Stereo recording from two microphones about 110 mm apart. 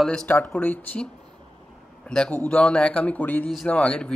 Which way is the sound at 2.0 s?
10° left (ahead or behind).